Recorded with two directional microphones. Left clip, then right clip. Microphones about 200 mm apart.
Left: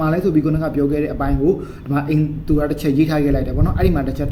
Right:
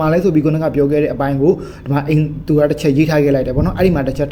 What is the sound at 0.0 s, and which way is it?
Speech, 30° right (ahead or behind).